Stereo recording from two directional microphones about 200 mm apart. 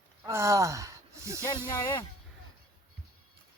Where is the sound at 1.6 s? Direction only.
15° left (ahead or behind).